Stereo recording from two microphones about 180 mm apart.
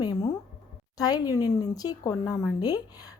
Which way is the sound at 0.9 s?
20° left (ahead or behind).